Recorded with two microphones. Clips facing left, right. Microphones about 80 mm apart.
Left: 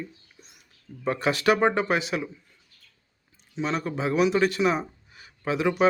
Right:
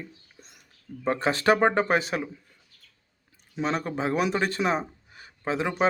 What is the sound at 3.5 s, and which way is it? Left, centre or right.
Speech, right.